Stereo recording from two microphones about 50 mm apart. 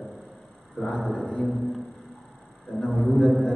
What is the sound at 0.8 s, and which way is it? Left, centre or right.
Speech, centre.